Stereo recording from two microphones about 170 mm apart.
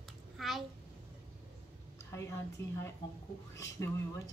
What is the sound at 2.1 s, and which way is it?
Speech, 20° left (ahead or behind).